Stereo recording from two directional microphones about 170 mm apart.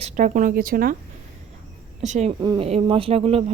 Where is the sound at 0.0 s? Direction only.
45° right (ahead or behind).